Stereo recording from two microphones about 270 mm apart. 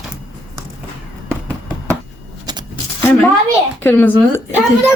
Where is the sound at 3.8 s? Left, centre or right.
Centre.